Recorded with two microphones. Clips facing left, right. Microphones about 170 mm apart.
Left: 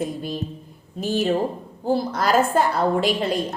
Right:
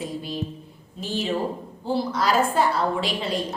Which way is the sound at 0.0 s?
50° left (ahead or behind).